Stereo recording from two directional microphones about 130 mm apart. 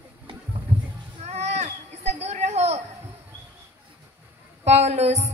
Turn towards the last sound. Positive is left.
turn(degrees=-55)  # may be behind; listen again after turning